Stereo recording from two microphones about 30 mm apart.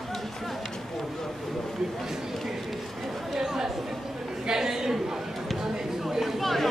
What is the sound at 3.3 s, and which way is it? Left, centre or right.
Chatter, centre.